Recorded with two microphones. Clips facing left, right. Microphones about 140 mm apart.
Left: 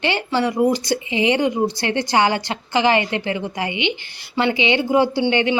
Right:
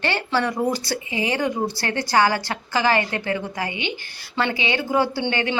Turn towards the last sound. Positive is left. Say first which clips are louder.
# left 5 dB
turn(degrees=20)  # may be behind; listen again after turning